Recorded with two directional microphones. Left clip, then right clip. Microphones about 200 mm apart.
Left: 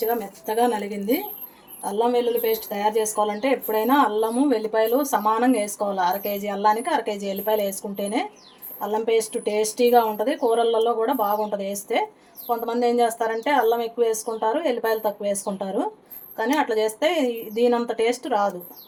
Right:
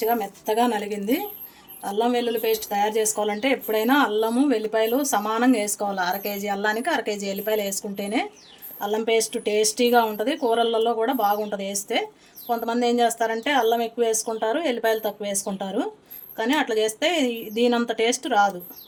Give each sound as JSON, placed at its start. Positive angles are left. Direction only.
{"t": 0.0, "sound": "speech", "side_deg": -35}